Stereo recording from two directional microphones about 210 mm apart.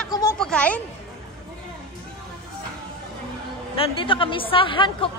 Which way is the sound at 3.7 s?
25° left (ahead or behind).